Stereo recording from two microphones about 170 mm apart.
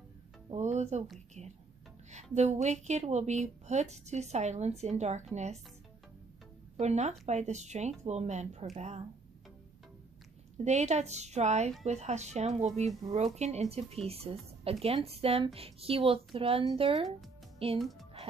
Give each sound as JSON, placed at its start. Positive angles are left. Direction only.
{"t": 0.5, "sound": "speech", "side_deg": -45}
{"t": 2.3, "sound": "a woman's voice", "side_deg": -40}
{"t": 6.8, "sound": "a woman's voice", "side_deg": -40}
{"t": 10.6, "sound": "a woman's voice", "side_deg": -40}
{"t": 17.7, "sound": "a child's voice", "side_deg": 0}